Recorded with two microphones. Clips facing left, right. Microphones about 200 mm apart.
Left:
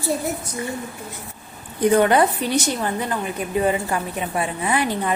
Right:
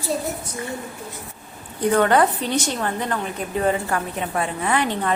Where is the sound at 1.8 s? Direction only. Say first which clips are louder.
Left 1 dB; 15° left (ahead or behind).